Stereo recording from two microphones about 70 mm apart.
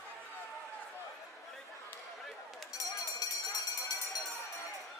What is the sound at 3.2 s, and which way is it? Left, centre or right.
Music, left.